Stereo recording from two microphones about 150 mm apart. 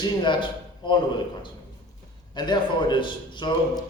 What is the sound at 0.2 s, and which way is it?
Speech, 30° left (ahead or behind).